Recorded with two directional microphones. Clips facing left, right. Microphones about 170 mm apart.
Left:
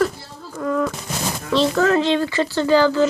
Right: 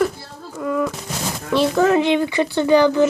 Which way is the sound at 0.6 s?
10° right (ahead or behind).